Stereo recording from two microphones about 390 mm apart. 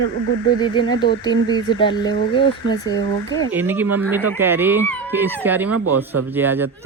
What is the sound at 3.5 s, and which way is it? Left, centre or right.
A man's voice, centre.